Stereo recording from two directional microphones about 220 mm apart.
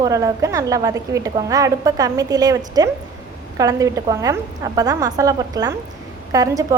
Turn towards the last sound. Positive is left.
turn(degrees=-15)  # may be behind; listen again after turning